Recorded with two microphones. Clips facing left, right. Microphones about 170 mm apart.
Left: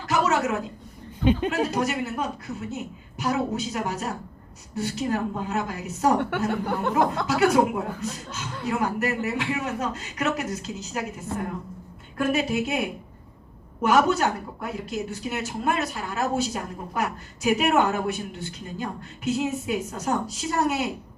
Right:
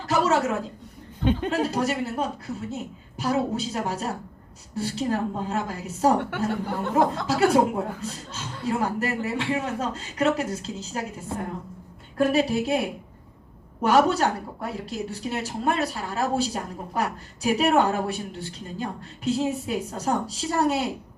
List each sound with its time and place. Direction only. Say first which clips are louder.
0.1 s a man's voice: right 1 dB; 30° right (ahead or behind)
1.2 s speech: left 2 dB; 15° left (ahead or behind)
1.5 s speech: even; 30° right (ahead or behind)
12.1 s speech: right 2 dB; 35° right (ahead or behind)